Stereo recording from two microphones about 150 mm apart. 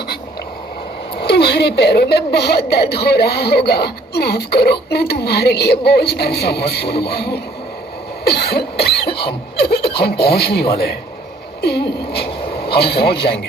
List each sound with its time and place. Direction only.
1.1 s a woman's voice: 90° left
8.2 s cough: 90° left
9.0 s cough: 35° left (ahead or behind)
10.0 s a woman's voice: 90° left